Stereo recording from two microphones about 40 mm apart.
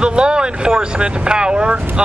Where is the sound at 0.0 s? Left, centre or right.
Right.